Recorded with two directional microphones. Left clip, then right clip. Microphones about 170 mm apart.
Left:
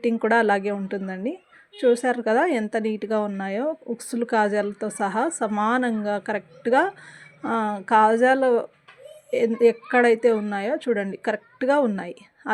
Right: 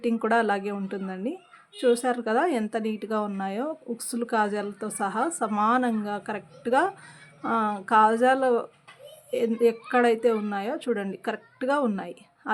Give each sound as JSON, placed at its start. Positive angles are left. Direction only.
{"t": 0.0, "sound": "speech", "side_deg": 20}